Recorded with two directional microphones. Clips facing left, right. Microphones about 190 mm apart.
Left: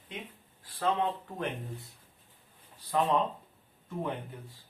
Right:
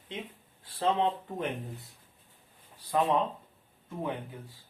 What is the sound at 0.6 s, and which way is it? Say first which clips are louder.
Speech: right 2 dB; 25° right (ahead or behind).